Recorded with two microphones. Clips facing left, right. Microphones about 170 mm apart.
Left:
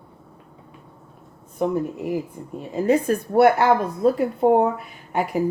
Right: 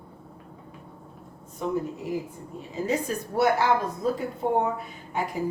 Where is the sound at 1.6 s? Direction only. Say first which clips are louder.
Left 6 dB; 55° left (ahead or behind).